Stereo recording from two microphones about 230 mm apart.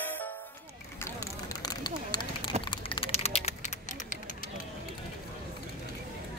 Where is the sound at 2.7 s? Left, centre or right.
Left.